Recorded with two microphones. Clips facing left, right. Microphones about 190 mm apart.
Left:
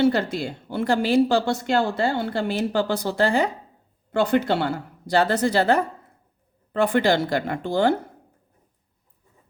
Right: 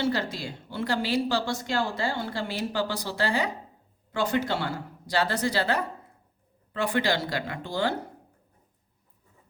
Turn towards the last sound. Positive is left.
turn(degrees=50)  # may be behind; listen again after turning